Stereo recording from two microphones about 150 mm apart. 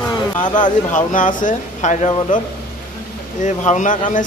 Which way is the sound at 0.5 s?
60° left (ahead or behind).